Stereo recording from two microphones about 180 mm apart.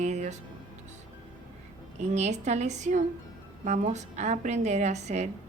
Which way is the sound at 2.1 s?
40° right (ahead or behind).